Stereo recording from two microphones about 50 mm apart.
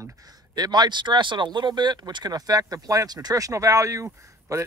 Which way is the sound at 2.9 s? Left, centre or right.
Right.